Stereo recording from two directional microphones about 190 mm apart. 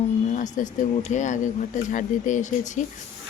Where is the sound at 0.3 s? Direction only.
40° left (ahead or behind).